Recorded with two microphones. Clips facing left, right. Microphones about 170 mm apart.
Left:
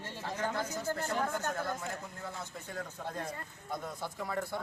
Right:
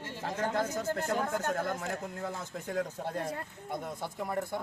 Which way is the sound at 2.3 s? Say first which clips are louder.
Right 8 dB; 45° right (ahead or behind).